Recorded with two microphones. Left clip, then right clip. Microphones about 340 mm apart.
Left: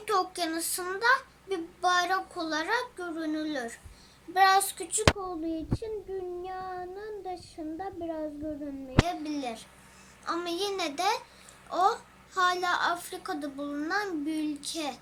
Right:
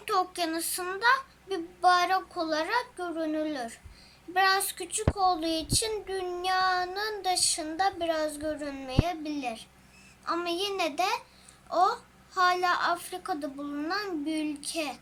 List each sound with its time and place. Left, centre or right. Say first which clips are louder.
0.0 s child singing: even; centre
5.3 s child singing: right 6 dB; right
9.0 s child singing: right 1 dB; centre